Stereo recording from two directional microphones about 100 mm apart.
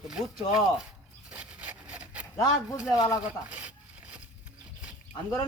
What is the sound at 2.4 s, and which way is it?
Speech, 35° left (ahead or behind).